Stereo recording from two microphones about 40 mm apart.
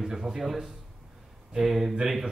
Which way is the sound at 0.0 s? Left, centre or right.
Centre.